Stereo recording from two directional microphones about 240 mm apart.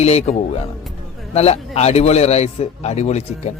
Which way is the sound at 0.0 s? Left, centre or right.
Left.